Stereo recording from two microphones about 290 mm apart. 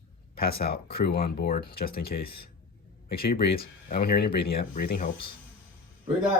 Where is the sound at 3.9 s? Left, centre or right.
Left.